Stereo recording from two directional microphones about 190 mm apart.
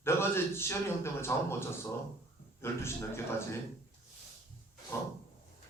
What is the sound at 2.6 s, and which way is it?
Speech, 15° left (ahead or behind).